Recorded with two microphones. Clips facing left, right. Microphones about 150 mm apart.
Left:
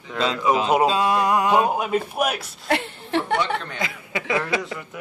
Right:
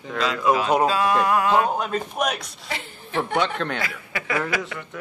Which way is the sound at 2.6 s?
65° left (ahead or behind).